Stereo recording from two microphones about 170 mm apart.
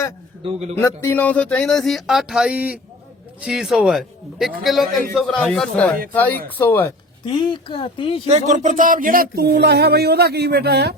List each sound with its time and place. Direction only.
0.4 s a man's voice: 40° right (ahead or behind)
0.8 s speech: 15° left (ahead or behind)
7.3 s speech: 25° left (ahead or behind)
8.3 s a sound: 45° right (ahead or behind); by 10.9 s 75° right (ahead or behind)